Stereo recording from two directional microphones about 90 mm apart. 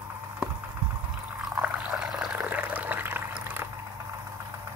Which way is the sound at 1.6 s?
15° right (ahead or behind).